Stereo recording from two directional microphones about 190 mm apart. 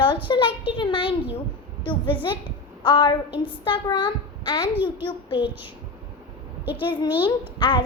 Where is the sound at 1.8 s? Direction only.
25° left (ahead or behind).